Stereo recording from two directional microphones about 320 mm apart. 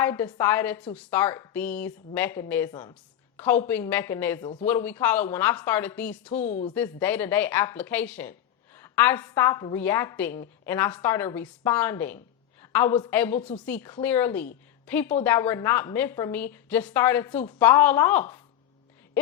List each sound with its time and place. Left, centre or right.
0.0 s a woman's voice: centre
6.5 s speech: left
6.7 s speech: centre